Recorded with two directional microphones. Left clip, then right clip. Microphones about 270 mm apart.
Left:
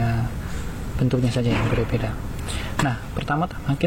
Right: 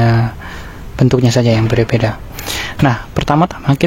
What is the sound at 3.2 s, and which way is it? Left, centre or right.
Speech, right.